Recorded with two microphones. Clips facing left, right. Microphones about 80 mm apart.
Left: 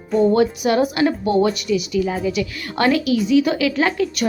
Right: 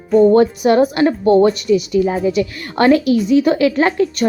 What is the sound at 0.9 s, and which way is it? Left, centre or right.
A woman's voice, right.